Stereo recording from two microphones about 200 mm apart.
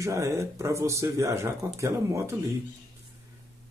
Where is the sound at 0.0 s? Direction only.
15° right (ahead or behind).